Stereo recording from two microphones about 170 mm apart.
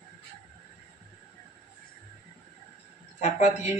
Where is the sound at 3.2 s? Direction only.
45° left (ahead or behind).